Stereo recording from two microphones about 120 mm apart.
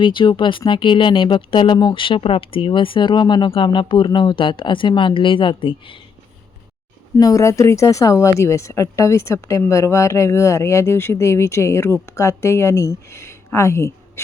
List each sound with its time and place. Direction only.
0.0 s speech: 40° left (ahead or behind)
7.2 s speech: 30° left (ahead or behind)